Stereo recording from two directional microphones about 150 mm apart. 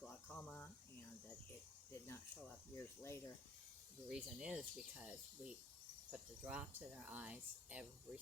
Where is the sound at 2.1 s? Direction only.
20° left (ahead or behind).